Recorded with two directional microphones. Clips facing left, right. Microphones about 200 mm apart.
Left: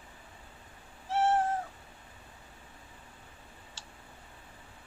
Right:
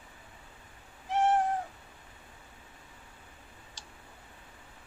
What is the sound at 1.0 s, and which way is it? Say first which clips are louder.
Cat: right 1 dB; 15° right (ahead or behind).